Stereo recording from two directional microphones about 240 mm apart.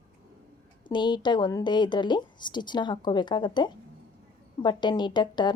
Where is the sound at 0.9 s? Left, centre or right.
Centre.